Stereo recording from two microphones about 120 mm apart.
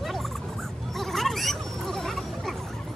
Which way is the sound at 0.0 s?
Centre (ahead or behind).